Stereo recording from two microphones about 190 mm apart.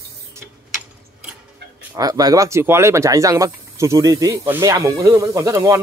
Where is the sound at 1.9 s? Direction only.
20° right (ahead or behind).